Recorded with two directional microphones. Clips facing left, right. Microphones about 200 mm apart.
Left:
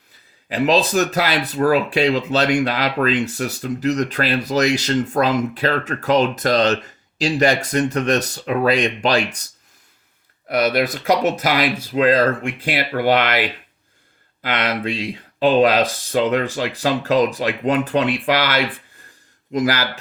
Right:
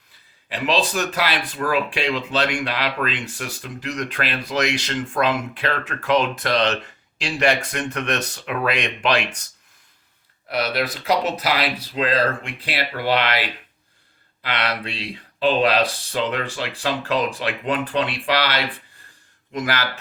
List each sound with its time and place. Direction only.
0.4 s speech: 40° left (ahead or behind)
10.5 s speech: 50° left (ahead or behind)